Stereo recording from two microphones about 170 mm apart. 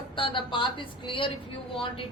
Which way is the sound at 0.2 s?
30° left (ahead or behind).